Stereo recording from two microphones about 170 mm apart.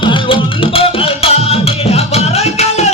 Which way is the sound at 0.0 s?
30° left (ahead or behind).